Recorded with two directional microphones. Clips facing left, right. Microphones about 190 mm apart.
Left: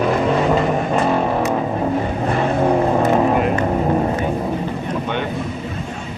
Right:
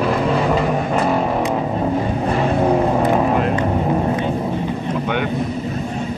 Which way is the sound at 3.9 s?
5° left (ahead or behind).